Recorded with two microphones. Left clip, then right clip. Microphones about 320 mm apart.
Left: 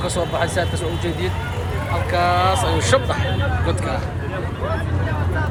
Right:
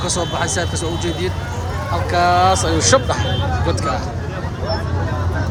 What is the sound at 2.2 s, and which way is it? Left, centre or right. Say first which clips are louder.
Speech: right 4 dB; centre.